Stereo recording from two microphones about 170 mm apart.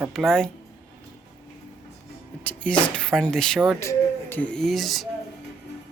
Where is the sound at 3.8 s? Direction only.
15° left (ahead or behind).